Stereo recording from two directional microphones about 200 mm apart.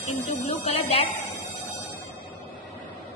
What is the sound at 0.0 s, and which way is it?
Speech, 30° left (ahead or behind).